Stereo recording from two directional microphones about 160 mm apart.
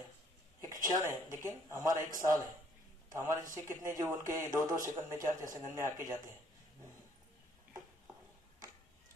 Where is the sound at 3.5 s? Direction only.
20° right (ahead or behind).